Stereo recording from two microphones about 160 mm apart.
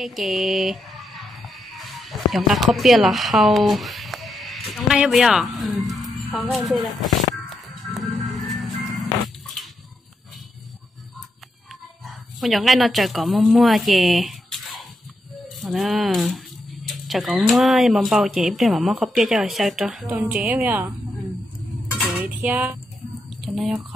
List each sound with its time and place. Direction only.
0.0 s speech: centre (ahead or behind)
5.9 s music: centre (ahead or behind)
6.5 s speech: centre (ahead or behind)
7.4 s music: centre (ahead or behind)
12.4 s a woman's voice: centre (ahead or behind)
21.9 s dishes: 5° right (ahead or behind)
23.4 s speech: centre (ahead or behind)